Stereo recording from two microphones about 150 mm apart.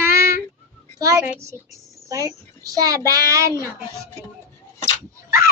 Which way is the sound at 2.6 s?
25° right (ahead or behind).